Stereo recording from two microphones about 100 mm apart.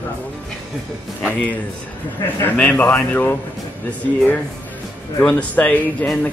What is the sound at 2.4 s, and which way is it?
Speech, 20° left (ahead or behind).